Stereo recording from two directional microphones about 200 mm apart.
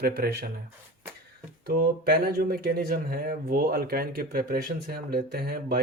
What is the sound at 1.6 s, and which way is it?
Speech, 50° right (ahead or behind).